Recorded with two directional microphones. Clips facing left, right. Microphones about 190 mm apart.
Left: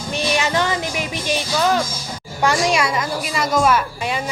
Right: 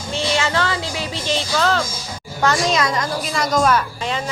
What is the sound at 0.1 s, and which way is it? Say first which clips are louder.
A woman's voice: even; 15° left (ahead or behind).